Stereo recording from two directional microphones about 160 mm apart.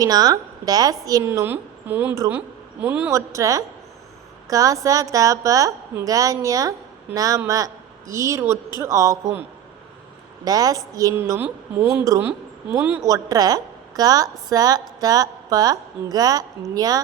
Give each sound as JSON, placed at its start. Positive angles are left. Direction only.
{"t": 0.0, "sound": "a woman's voice", "side_deg": -25}
{"t": 10.4, "sound": "a woman's voice", "side_deg": -25}